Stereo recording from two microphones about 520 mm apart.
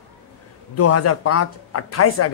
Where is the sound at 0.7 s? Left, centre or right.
Left.